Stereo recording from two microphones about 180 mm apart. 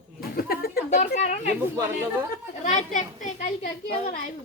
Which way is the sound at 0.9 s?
40° left (ahead or behind).